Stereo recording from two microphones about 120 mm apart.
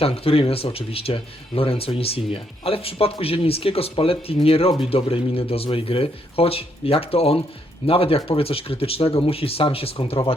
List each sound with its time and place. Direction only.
0.0 s speech: 50° left (ahead or behind)